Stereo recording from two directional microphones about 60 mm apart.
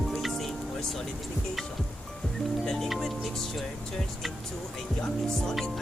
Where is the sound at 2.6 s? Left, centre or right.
Centre.